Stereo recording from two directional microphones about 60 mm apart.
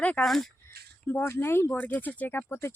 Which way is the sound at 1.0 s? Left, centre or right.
Left.